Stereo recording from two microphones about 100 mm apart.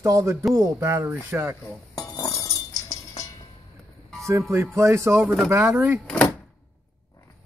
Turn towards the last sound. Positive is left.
turn(degrees=10)  # may be behind; listen again after turning